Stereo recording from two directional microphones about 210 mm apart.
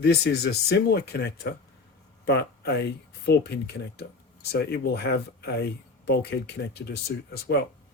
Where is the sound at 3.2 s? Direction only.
50° left (ahead or behind).